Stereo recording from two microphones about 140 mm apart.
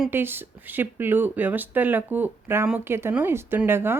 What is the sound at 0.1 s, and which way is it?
Speech, 15° right (ahead or behind).